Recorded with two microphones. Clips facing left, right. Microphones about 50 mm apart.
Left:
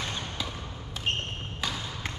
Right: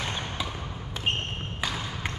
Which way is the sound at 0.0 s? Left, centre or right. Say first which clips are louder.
Right 2 dB; right.